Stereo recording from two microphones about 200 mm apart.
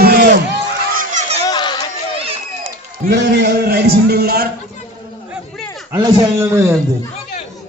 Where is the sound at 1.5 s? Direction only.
20° left (ahead or behind).